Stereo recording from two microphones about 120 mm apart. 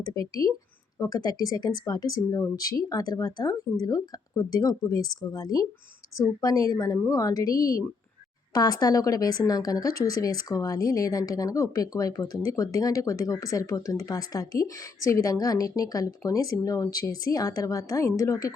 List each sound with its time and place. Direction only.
0.1 s speech: 30° left (ahead or behind)